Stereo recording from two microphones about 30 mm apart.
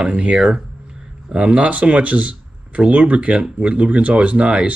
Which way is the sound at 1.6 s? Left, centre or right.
Right.